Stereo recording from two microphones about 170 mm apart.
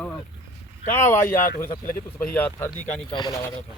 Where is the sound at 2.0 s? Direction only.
10° left (ahead or behind).